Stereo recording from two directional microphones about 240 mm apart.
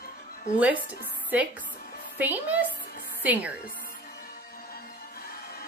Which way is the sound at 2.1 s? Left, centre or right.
Centre.